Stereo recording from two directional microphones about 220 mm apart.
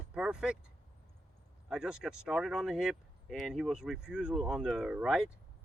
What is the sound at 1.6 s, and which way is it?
Speech, 5° right (ahead or behind).